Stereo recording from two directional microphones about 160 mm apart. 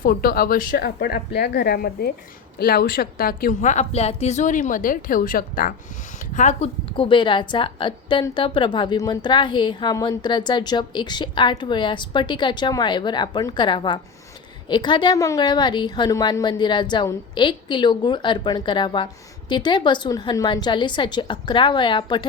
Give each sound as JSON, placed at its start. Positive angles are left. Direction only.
{"t": 0.0, "sound": "a woman's voice", "side_deg": 65}
{"t": 6.3, "sound": "speech", "side_deg": 45}
{"t": 6.9, "sound": "a woman's voice", "side_deg": 30}